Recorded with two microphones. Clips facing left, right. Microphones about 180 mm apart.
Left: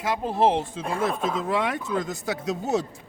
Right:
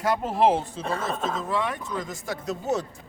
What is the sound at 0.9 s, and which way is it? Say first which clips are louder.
Speech: left 4 dB; 10° left (ahead or behind).